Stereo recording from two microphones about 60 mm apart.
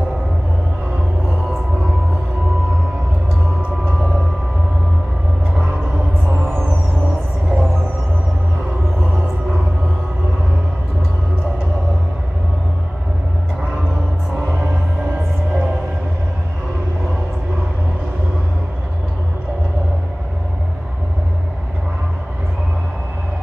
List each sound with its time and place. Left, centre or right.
3.8 s vehicle: centre
7.4 s music: centre
14.3 s music: centre